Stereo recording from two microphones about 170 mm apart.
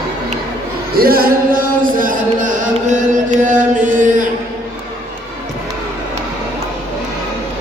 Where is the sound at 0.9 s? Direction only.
60° right (ahead or behind).